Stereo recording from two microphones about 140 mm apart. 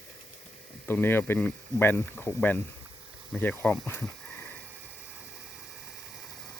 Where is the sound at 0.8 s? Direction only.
15° left (ahead or behind).